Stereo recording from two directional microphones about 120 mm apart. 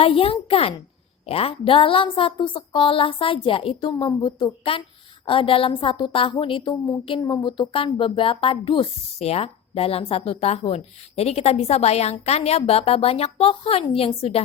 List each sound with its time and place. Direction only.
0.0 s speech: 55° left (ahead or behind)
9.1 s speech: 60° left (ahead or behind)